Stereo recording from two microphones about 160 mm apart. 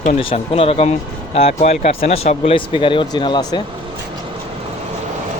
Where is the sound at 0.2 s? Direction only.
35° left (ahead or behind).